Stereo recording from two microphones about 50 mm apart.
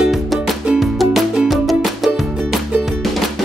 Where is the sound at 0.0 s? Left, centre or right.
Centre.